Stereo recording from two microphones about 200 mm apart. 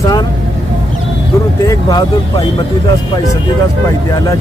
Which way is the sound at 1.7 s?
20° left (ahead or behind).